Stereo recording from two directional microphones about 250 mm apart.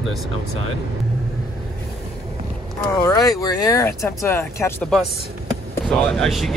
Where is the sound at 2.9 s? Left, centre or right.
Centre.